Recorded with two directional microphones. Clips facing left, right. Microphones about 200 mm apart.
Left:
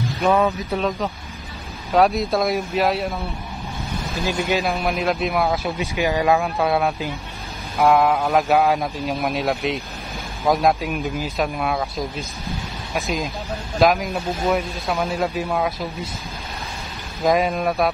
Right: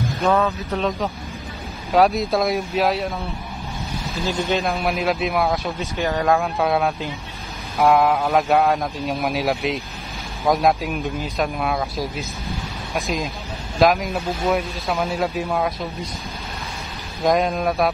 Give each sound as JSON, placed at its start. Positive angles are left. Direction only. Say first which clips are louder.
{"t": 0.2, "sound": "speech", "louder": "left 1 dB", "side_deg": 15}
{"t": 0.7, "sound": "speech", "louder": "even", "side_deg": 0}
{"t": 4.2, "sound": "speech", "louder": "even", "side_deg": 10}
{"t": 4.6, "sound": "speech", "louder": "even", "side_deg": 0}
{"t": 5.8, "sound": "speech", "louder": "left 2 dB", "side_deg": 10}
{"t": 17.2, "sound": "speech", "louder": "even", "side_deg": 0}